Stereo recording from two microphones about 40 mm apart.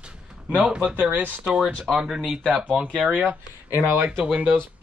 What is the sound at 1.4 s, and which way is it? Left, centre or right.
Speech, centre.